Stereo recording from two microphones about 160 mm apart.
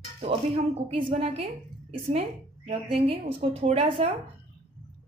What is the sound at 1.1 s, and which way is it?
Speech, 40° right (ahead or behind).